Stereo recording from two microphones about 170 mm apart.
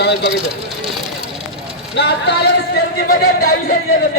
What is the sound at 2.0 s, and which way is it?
Speech, 85° left.